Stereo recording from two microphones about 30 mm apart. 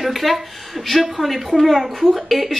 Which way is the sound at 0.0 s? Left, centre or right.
Centre.